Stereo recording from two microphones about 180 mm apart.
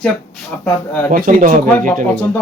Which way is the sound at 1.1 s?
50° right (ahead or behind).